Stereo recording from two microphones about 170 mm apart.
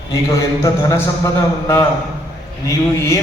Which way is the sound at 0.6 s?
15° left (ahead or behind).